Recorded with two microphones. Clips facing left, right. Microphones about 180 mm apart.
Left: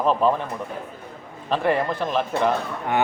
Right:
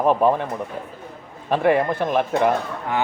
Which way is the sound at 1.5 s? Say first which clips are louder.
Right 3 dB; 10° right (ahead or behind).